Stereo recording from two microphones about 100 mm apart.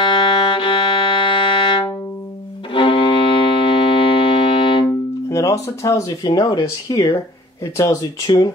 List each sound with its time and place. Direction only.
0.0 s music: 60° left (ahead or behind)
4.8 s music: 30° left (ahead or behind)
6.2 s speech: 40° left (ahead or behind)
8.3 s speech: 45° left (ahead or behind)